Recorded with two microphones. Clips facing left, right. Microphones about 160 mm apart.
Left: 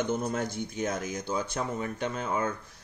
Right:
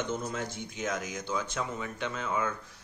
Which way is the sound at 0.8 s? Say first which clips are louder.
Even; 30° left (ahead or behind).